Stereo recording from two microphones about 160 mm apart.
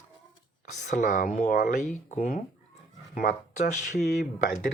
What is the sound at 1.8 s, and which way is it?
Speech, 50° left (ahead or behind).